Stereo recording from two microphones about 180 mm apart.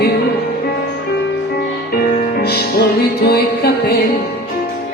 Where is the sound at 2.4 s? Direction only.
65° left (ahead or behind).